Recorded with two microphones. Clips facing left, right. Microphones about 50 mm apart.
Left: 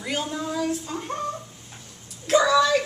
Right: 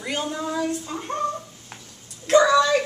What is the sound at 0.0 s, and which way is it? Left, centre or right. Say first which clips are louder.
Speech: right 1 dB; centre.